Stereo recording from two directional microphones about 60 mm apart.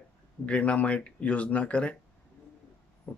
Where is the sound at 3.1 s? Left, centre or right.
Left.